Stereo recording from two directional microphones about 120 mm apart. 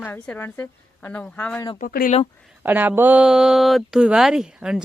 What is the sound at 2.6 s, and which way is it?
Speech, 15° right (ahead or behind).